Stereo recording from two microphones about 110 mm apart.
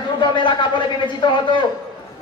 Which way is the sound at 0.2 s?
45° left (ahead or behind).